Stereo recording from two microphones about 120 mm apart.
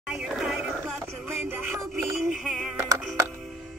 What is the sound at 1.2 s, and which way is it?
Music, 15° right (ahead or behind).